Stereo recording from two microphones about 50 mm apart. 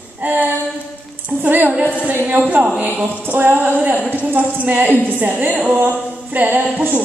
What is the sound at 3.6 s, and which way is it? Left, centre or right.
A woman's voice, right.